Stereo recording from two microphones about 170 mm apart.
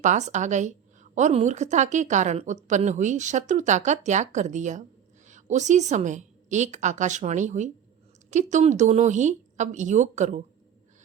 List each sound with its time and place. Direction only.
0.0 s a woman's voice: 45° right (ahead or behind)